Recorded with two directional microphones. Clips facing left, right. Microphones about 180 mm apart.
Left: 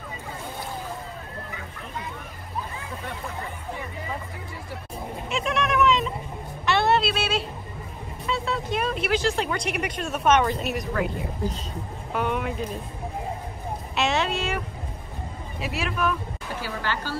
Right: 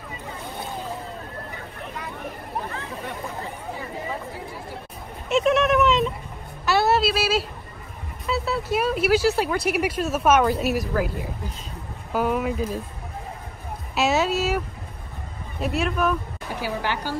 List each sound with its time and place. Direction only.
5.3 s speech: centre (ahead or behind)
6.6 s a sound: 5° right (ahead or behind)
8.3 s speech: 5° right (ahead or behind)
13.9 s speech: 5° right (ahead or behind)
15.6 s speech: centre (ahead or behind)
16.5 s a woman's voice: 15° right (ahead or behind)